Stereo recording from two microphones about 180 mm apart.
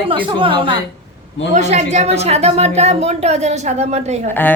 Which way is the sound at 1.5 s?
40° right (ahead or behind).